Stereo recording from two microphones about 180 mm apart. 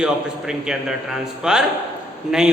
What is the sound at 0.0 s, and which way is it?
A man's voice, 5° right (ahead or behind).